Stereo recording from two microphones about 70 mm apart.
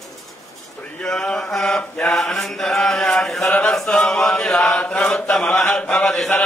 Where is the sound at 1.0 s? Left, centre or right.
Centre.